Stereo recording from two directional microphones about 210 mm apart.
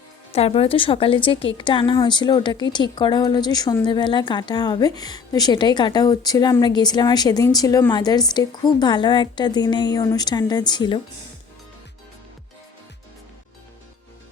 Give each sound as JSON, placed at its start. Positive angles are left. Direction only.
{"t": 0.3, "sound": "a woman's voice", "side_deg": 30}